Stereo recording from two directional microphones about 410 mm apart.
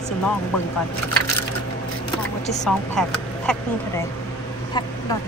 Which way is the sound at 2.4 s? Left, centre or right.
Centre.